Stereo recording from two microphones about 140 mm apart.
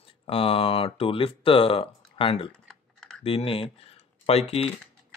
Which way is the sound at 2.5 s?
5° left (ahead or behind).